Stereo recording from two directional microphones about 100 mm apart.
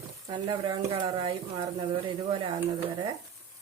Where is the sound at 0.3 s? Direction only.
45° right (ahead or behind).